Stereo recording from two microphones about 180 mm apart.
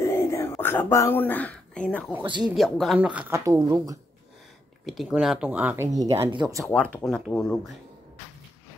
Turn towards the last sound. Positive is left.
turn(degrees=0)  # may be behind; listen again after turning